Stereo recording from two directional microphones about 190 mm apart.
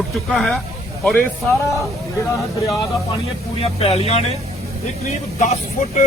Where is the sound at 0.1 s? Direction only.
Centre (ahead or behind).